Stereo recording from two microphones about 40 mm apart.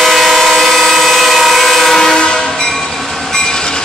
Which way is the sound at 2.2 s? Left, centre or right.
Left.